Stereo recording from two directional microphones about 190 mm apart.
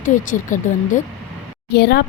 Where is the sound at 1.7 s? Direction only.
55° left (ahead or behind).